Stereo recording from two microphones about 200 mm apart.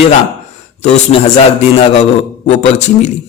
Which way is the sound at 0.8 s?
35° left (ahead or behind).